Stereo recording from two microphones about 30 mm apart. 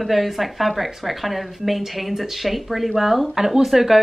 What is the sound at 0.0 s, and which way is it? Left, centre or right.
Speech, centre.